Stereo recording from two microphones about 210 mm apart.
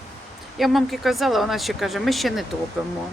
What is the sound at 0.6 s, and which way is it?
Speech, centre (ahead or behind).